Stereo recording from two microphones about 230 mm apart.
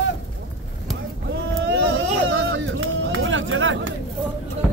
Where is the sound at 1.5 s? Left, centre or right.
Right.